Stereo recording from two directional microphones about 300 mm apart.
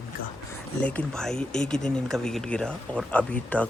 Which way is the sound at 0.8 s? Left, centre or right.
Centre.